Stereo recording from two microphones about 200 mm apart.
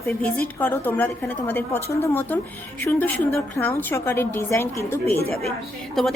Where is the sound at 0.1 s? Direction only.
10° left (ahead or behind).